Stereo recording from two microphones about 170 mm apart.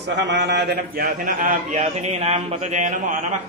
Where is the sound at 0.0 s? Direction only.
90° right; by 3.2 s 45° right (ahead or behind).